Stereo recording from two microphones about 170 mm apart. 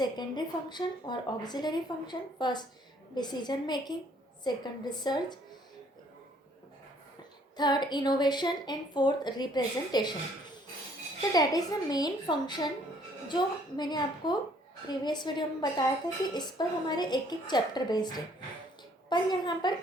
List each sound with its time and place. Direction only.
0.0 s speech: 25° left (ahead or behind)
7.5 s speech: 25° left (ahead or behind)
11.2 s speech: 25° left (ahead or behind)